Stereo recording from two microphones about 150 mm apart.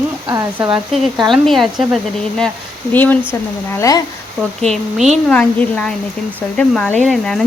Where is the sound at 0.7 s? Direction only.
Centre (ahead or behind).